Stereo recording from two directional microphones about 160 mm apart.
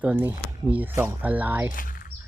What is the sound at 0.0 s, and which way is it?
Speech, 10° right (ahead or behind).